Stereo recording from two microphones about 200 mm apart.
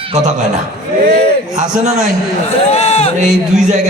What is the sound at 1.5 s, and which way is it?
Speech, 35° right (ahead or behind).